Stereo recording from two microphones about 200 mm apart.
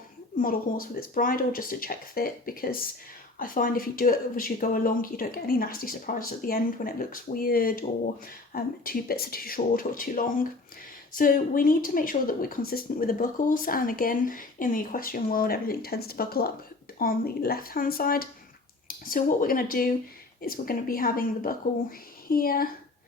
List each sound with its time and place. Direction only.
0.3 s a woman's voice: 45° left (ahead or behind)